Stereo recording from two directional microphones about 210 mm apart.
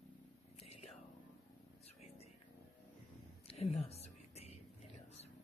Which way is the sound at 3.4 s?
30° left (ahead or behind).